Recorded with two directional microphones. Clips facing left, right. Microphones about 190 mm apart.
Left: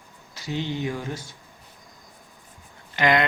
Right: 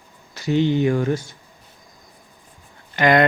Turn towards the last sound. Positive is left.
turn(degrees=-50)  # may be behind; listen again after turning